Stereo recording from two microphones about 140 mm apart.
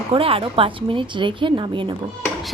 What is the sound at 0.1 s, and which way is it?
A woman's voice, 40° right (ahead or behind).